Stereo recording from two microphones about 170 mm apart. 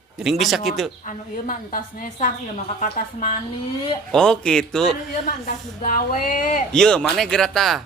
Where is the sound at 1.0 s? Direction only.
50° left (ahead or behind).